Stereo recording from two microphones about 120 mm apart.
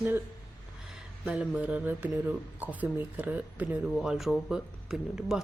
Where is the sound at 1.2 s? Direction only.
10° right (ahead or behind).